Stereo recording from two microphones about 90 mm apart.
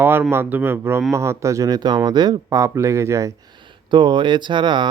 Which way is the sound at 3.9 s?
60° right (ahead or behind).